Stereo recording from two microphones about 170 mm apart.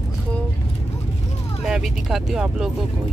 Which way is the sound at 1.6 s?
Centre (ahead or behind).